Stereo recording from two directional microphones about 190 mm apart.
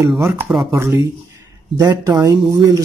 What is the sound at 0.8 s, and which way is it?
Speech, 15° right (ahead or behind).